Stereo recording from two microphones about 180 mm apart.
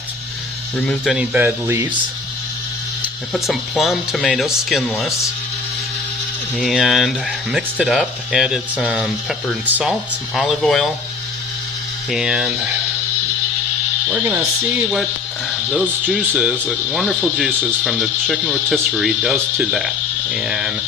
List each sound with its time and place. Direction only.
0.9 s speech: 5° right (ahead or behind)
1.4 s speech: 15° right (ahead or behind)
3.0 s speech: centre (ahead or behind)
6.6 s speech: centre (ahead or behind)
12.1 s speech: 5° right (ahead or behind)
14.1 s speech: 10° right (ahead or behind)
16.0 s speech: 5° right (ahead or behind)